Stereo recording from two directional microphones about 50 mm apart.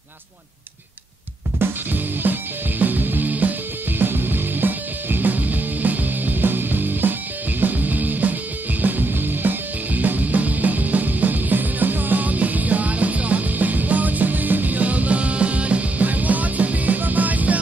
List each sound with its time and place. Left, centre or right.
1.6 s music: right